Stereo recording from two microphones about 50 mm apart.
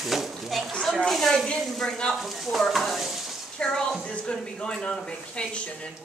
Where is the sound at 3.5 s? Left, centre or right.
Centre.